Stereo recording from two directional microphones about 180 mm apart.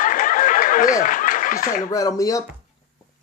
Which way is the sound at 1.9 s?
20° left (ahead or behind).